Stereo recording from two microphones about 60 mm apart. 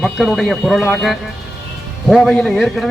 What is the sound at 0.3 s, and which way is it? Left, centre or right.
Speech, centre.